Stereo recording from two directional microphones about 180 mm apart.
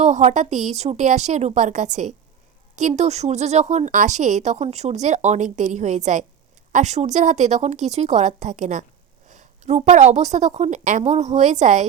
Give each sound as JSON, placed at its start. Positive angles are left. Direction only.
{"t": 0.0, "sound": "a woman's voice", "side_deg": -40}